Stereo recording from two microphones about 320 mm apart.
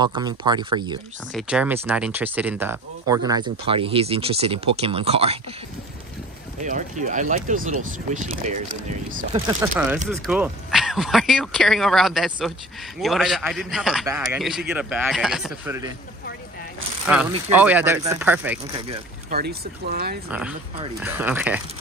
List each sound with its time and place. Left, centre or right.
0.0 s speech: centre
1.3 s speech: centre
6.6 s speech: right
9.3 s speech: centre
17.0 s speech: centre
19.3 s speech: right
20.2 s speech: centre